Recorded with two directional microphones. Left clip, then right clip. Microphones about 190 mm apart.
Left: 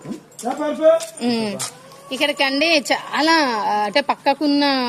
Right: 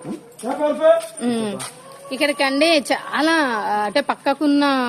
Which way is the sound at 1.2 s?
10° right (ahead or behind).